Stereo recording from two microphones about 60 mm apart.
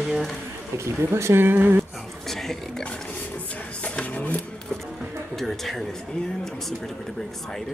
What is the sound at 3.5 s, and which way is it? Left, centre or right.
Vehicle, left.